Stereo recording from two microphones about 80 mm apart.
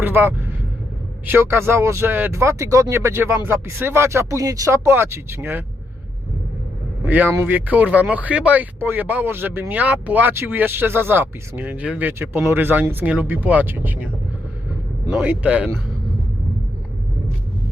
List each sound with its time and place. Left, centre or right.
0.0 s speech: right
4.9 s speech: right
7.0 s speech: right
15.1 s speech: centre